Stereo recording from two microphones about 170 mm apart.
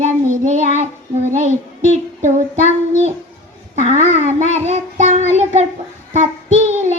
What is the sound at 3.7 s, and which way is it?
Child singing, 40° right (ahead or behind).